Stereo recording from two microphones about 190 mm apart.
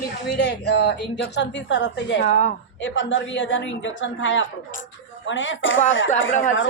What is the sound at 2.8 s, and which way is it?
A woman's voice, 80° left.